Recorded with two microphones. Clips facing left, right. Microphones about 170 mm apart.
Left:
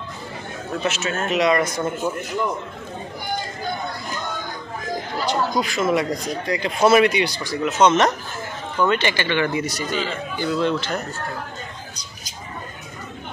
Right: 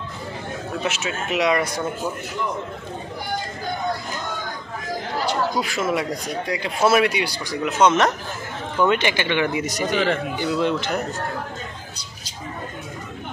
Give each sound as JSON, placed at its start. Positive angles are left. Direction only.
{"t": 0.8, "sound": "speech", "side_deg": -10}
{"t": 5.2, "sound": "speech", "side_deg": -10}
{"t": 9.8, "sound": "speech", "side_deg": -70}
{"t": 10.4, "sound": "speech", "side_deg": -10}